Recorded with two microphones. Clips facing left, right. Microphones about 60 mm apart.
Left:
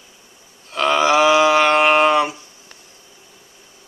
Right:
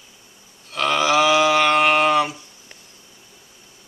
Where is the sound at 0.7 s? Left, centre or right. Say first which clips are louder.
Left 3 dB; centre.